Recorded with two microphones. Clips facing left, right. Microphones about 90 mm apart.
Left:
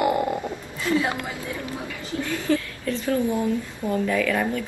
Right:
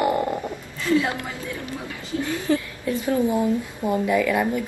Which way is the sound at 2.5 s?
20° right (ahead or behind).